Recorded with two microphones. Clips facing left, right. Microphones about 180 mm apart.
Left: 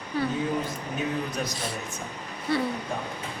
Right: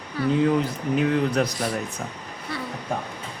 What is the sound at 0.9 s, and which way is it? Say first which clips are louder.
Speech: right 9 dB; 80° right.